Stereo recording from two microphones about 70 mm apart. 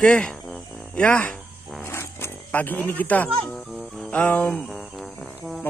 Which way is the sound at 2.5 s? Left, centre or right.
Left.